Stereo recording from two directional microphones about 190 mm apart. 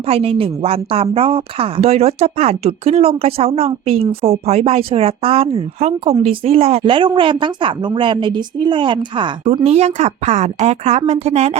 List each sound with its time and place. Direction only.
0.0 s a woman's voice: 30° right (ahead or behind)